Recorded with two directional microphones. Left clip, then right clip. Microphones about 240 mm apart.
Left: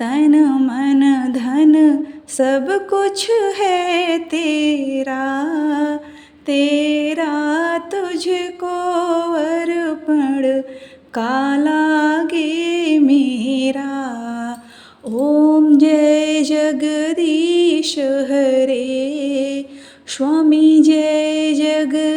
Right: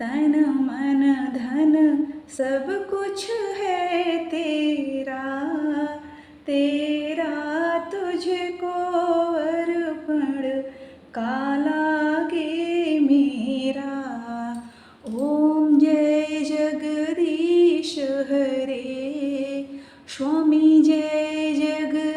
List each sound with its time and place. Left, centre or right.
0.0 s music: left
2.4 s a sound: left
6.5 s music: left
8.8 s a sound: left
11.1 s music: left
15.4 s mantra: left
20.1 s music: left